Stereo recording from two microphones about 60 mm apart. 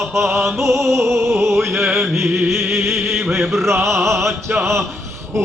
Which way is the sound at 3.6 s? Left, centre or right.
Right.